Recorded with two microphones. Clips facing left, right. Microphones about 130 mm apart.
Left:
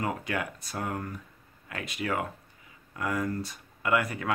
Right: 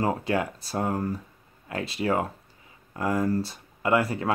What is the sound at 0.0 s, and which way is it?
Speech, 30° right (ahead or behind).